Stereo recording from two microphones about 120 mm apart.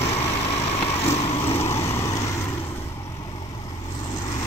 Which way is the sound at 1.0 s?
60° left (ahead or behind).